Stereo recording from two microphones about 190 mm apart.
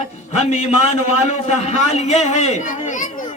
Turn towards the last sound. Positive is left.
turn(degrees=40)  # may be behind; listen again after turning